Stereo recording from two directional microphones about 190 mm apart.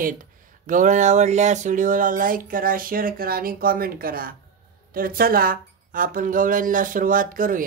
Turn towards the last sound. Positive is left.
turn(degrees=-45)  # may be behind; listen again after turning